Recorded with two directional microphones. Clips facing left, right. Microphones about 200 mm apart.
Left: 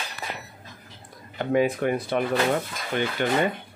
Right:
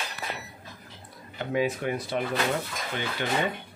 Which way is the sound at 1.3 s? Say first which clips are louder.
Left 5 dB; 55° left (ahead or behind).